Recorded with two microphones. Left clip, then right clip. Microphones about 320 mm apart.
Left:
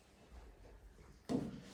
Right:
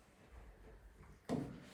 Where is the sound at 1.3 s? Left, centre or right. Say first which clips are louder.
Left 2 dB; centre.